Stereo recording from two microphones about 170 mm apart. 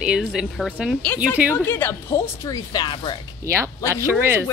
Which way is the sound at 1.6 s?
15° left (ahead or behind).